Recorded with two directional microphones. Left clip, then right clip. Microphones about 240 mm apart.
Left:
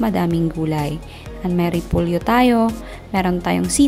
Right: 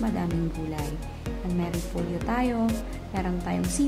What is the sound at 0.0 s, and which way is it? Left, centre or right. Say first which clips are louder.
Speech: left 10 dB; left.